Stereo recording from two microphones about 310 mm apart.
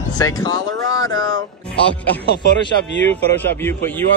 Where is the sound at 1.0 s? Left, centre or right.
Centre.